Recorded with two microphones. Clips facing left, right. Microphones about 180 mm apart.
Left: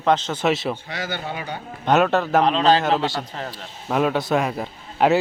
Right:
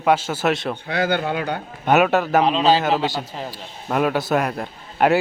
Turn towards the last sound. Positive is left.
turn(degrees=0)  # may be behind; listen again after turning